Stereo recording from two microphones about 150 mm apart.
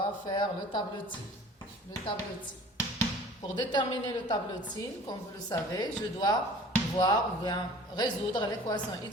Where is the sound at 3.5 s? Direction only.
30° left (ahead or behind).